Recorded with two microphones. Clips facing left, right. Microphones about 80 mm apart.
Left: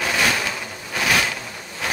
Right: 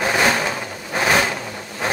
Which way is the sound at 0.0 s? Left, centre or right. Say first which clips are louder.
Right 3 dB; right.